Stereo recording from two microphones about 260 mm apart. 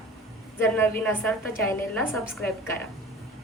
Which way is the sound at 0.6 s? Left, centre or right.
Centre.